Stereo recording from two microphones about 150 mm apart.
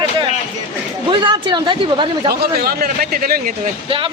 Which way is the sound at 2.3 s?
90° right.